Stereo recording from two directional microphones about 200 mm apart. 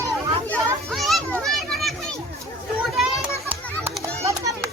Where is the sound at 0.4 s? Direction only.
5° left (ahead or behind).